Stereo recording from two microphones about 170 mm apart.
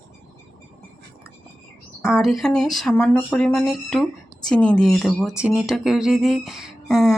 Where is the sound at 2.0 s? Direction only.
Centre (ahead or behind).